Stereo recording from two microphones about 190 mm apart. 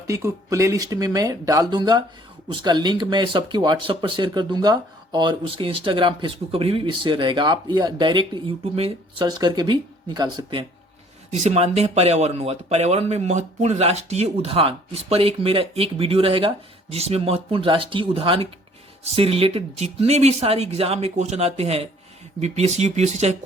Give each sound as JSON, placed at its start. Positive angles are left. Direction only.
{"t": 0.1, "sound": "speech", "side_deg": -15}
{"t": 11.3, "sound": "speech", "side_deg": -35}